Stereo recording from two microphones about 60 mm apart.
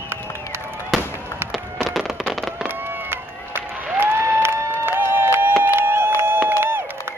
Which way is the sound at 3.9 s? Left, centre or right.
Right.